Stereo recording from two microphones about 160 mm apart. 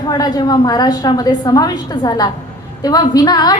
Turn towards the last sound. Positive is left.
turn(degrees=25)  # may be behind; listen again after turning